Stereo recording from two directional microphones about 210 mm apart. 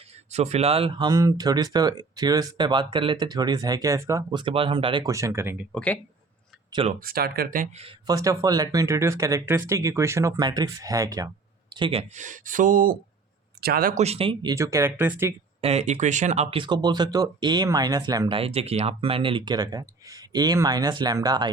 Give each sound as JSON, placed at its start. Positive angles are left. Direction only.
{"t": 0.3, "sound": "speech", "side_deg": -30}
{"t": 5.7, "sound": "speech", "side_deg": 5}
{"t": 6.7, "sound": "speech", "side_deg": -20}
{"t": 7.0, "sound": "speech", "side_deg": -45}
{"t": 7.9, "sound": "speech", "side_deg": -15}
{"t": 14.5, "sound": "speech", "side_deg": -15}
{"t": 15.6, "sound": "speech", "side_deg": -30}